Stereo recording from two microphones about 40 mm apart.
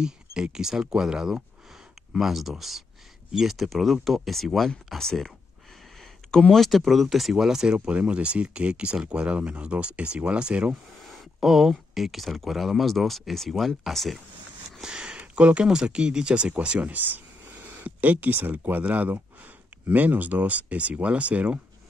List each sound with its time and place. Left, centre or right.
0.0 s speech: centre
2.1 s speech: centre
6.5 s speech: centre
7.8 s speech: right
11.4 s speech: centre
14.8 s a sound: centre
15.3 s speech: right
15.6 s speech: centre
16.9 s speech: right